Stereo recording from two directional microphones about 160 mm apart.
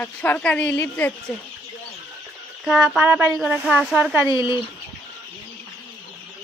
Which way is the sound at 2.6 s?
Centre (ahead or behind).